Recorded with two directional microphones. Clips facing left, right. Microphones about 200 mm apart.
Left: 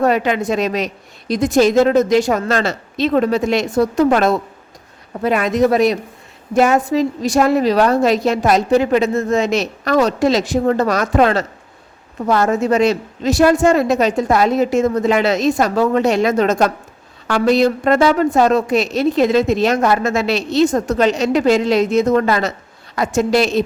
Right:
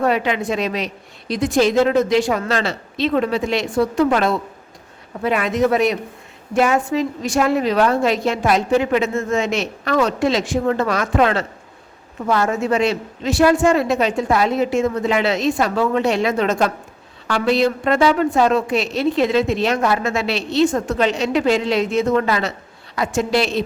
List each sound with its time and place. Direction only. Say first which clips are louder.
0.0 s a woman's voice: left 3 dB; 45° left (ahead or behind)